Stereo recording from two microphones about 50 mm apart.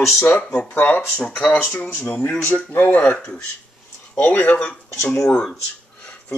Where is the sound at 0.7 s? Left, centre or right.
Left.